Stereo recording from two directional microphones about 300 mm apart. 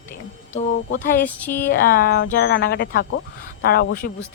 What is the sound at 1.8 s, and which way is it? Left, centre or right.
Speech, left.